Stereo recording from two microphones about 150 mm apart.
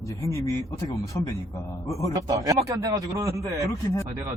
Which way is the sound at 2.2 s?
25° right (ahead or behind).